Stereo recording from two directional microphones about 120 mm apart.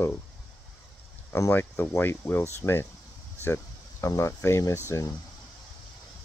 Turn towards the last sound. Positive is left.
turn(degrees=30)  # may be behind; listen again after turning